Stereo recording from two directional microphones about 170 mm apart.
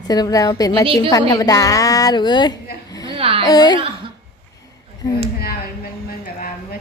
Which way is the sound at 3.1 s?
35° right (ahead or behind).